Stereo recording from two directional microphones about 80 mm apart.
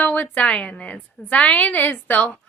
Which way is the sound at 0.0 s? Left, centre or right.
Centre.